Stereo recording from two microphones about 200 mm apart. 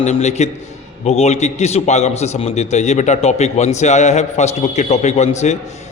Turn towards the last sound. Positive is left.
turn(degrees=35)  # may be behind; listen again after turning